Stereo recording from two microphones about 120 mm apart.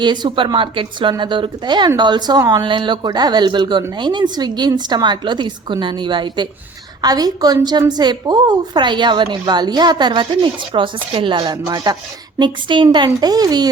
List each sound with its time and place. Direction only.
0.0 s speech: 40° right (ahead or behind)
11.6 s speech: 30° right (ahead or behind)